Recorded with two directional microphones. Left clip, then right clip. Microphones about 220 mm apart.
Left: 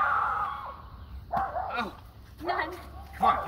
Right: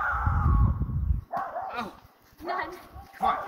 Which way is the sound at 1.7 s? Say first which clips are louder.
Left 2 dB; 45° right (ahead or behind).